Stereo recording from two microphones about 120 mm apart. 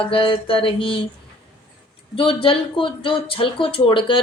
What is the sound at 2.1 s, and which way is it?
Speech, 50° left (ahead or behind).